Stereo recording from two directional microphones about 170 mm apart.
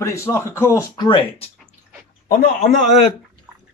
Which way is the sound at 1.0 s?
30° left (ahead or behind).